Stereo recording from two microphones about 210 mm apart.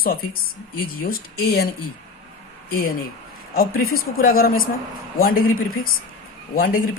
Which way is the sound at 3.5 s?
45° left (ahead or behind).